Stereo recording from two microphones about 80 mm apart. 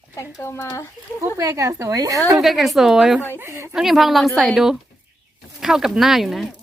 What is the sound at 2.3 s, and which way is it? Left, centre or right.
Speech, centre.